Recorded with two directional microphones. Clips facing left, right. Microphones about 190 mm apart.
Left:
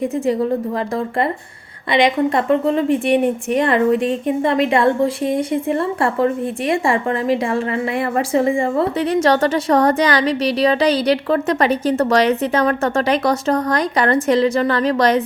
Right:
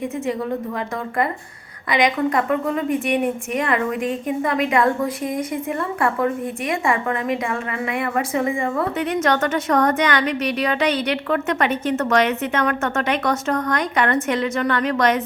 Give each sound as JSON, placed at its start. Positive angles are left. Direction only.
{"t": 1.9, "sound": "a woman's voice", "side_deg": 30}